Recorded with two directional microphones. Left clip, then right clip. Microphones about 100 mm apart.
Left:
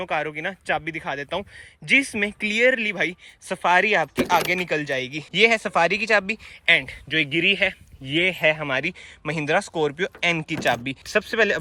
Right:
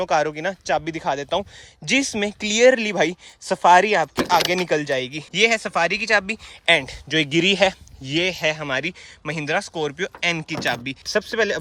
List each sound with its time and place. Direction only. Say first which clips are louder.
0.0 s speech: right 5 dB; 45° right (ahead or behind)
0.9 s speech: right 5 dB; 50° right (ahead or behind)
2.5 s speech: right 5 dB; 50° right (ahead or behind)
4.0 s speech: right 2 dB; 25° right (ahead or behind)
4.4 s speech: right 3 dB; 40° right (ahead or behind)
5.3 s speech: even; 20° right (ahead or behind)
6.7 s speech: right 1 dB; 50° right (ahead or behind)
8.1 s speech: left 1 dB; 25° right (ahead or behind)